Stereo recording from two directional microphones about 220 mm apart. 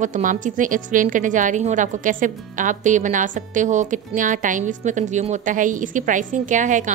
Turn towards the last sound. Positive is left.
turn(degrees=-35)  # may be behind; listen again after turning